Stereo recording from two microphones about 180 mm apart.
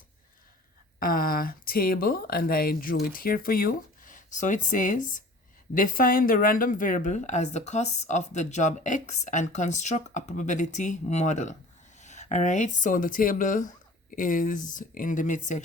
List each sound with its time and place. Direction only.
0.9 s speech: 55° left (ahead or behind)